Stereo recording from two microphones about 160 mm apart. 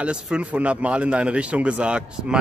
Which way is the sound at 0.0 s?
5° right (ahead or behind).